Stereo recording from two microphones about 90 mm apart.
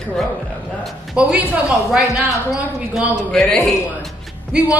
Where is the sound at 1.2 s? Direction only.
10° right (ahead or behind).